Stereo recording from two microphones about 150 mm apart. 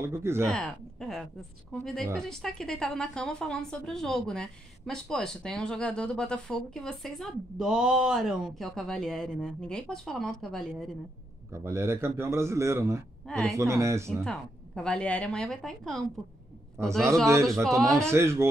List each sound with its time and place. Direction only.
0.0 s a man's voice: 15° right (ahead or behind)
0.5 s a woman's voice: 5° left (ahead or behind)
11.5 s a man's voice: 20° right (ahead or behind)
13.3 s a woman's voice: 5° left (ahead or behind)
13.6 s speech: 20° right (ahead or behind)
14.2 s a woman's voice: 5° left (ahead or behind)
16.8 s a man's voice: 15° right (ahead or behind)
17.6 s a woman's voice: centre (ahead or behind)
18.1 s a man's voice: 15° right (ahead or behind)